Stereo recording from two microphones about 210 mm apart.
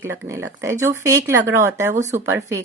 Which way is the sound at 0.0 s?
10° right (ahead or behind).